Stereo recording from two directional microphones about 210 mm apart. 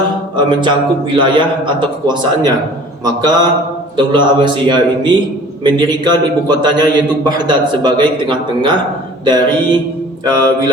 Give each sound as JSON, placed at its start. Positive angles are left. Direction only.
{"t": 0.3, "sound": "a man's voice", "side_deg": -20}